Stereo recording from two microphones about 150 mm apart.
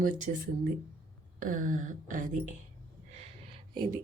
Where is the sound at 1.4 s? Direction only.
60° right (ahead or behind).